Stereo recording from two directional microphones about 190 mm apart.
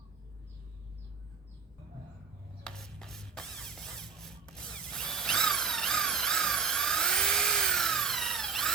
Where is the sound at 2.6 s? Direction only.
5° left (ahead or behind).